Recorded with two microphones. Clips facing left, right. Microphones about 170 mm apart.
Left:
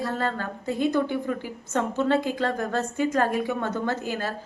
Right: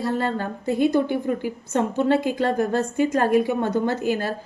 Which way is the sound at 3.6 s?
40° right (ahead or behind).